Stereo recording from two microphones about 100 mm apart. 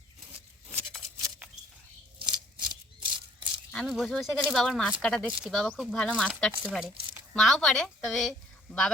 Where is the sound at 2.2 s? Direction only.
45° right (ahead or behind).